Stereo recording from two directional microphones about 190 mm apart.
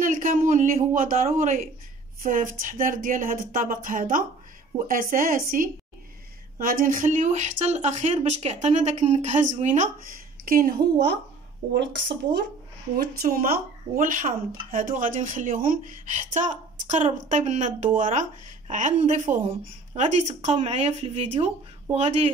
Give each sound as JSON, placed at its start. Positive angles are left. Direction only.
{"t": 0.0, "sound": "speech", "side_deg": -45}
{"t": 12.9, "sound": "speech", "side_deg": -50}